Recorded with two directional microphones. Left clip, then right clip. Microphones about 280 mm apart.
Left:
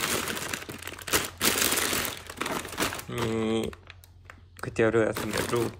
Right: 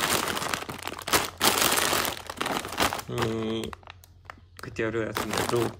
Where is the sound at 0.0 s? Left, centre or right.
Centre.